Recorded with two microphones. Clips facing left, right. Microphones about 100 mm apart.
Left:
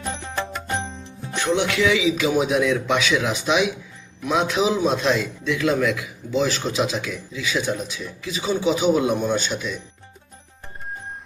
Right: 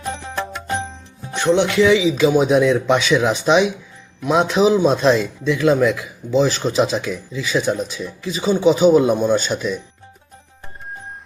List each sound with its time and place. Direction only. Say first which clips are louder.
0.2 s music: right 2 dB; 5° right (ahead or behind)
1.2 s a man's voice: right 5 dB; 20° right (ahead or behind)